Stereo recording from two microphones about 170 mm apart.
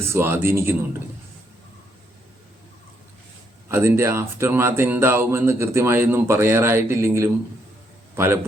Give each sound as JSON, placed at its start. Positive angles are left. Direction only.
{"t": 0.0, "sound": "speech", "side_deg": -15}
{"t": 3.7, "sound": "a man's voice", "side_deg": -15}